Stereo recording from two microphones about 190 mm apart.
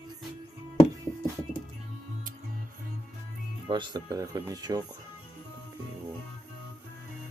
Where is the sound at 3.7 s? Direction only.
25° right (ahead or behind).